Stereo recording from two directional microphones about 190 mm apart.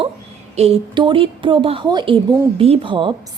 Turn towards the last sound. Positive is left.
turn(degrees=-25)  # may be behind; listen again after turning